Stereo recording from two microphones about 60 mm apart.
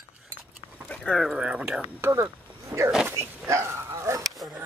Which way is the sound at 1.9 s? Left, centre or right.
Right.